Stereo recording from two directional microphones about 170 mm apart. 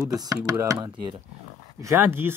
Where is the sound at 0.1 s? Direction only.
20° right (ahead or behind).